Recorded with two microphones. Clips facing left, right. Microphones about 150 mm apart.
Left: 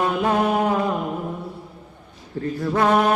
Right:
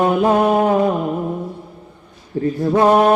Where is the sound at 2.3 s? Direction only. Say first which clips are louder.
Right 6 dB; 35° right (ahead or behind).